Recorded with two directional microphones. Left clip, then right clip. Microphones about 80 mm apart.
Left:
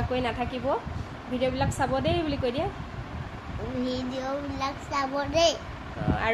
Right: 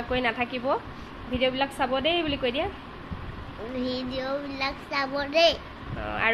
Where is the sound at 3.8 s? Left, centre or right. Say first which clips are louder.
Right 1 dB; left.